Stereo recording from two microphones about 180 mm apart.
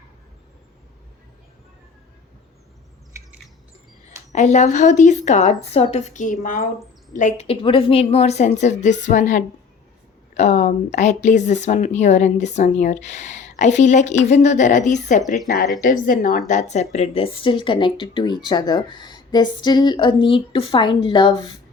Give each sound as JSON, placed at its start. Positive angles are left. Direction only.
{"t": 3.1, "sound": "squawk", "side_deg": -15}
{"t": 4.3, "sound": "speech", "side_deg": 40}
{"t": 15.4, "sound": "a woman's voice", "side_deg": 55}